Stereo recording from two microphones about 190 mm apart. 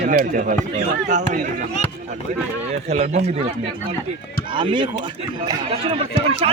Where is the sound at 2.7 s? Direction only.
35° right (ahead or behind).